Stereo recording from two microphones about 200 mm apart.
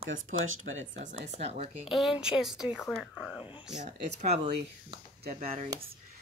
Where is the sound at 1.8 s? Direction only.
Centre (ahead or behind).